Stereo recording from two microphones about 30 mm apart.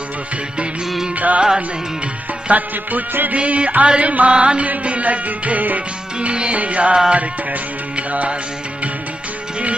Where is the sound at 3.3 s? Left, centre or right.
Right.